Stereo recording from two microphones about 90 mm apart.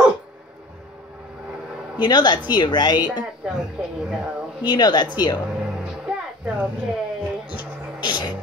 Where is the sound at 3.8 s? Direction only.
10° right (ahead or behind).